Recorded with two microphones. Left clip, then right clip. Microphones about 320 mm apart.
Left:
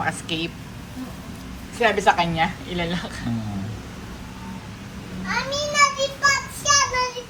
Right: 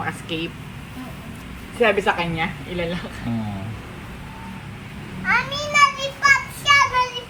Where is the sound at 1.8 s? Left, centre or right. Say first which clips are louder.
Even; centre.